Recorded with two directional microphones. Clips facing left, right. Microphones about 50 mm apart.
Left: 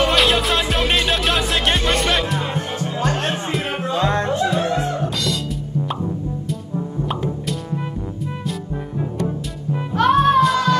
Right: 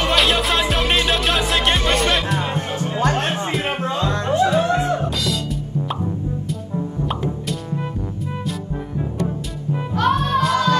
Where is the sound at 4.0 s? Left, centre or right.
Left.